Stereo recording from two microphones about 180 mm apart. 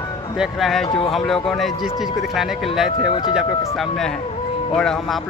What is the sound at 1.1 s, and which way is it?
Speech, centre (ahead or behind).